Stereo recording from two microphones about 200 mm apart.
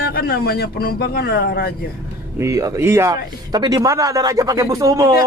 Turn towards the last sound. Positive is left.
turn(degrees=-15)  # may be behind; listen again after turning